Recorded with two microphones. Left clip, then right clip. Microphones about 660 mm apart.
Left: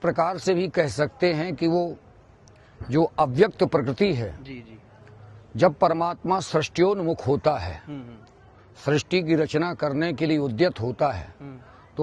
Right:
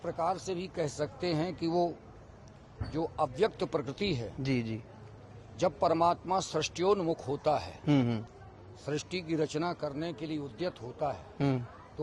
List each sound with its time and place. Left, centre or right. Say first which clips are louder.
0.0 s speech: left 10 dB; left
2.9 s a man's voice: left 11 dB; left
5.5 s a man's voice: left 8 dB; left
7.9 s speech: right 10 dB; right
8.9 s speech: left 12 dB; left